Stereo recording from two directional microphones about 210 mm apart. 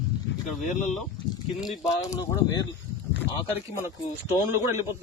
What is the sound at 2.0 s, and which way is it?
Speech, 15° left (ahead or behind).